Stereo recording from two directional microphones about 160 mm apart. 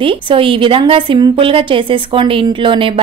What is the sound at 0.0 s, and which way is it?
A woman's voice, 35° right (ahead or behind).